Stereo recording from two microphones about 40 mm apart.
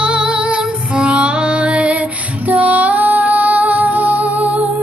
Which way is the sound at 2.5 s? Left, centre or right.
Right.